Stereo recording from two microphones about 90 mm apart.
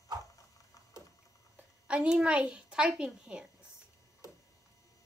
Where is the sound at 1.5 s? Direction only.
15° right (ahead or behind).